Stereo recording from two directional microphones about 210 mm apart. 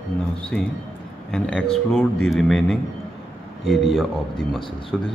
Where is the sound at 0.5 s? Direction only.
5° left (ahead or behind).